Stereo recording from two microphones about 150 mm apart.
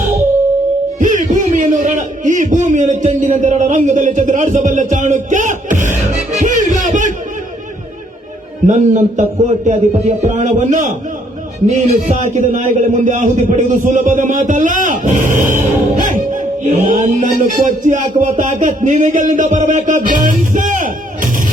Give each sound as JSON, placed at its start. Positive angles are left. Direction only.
{"t": 0.9, "sound": "a sound", "side_deg": -60}
{"t": 6.3, "sound": "music", "side_deg": -55}
{"t": 8.6, "sound": "a man's voice", "side_deg": -55}